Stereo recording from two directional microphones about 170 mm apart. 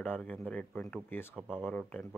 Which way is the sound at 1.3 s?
5° right (ahead or behind).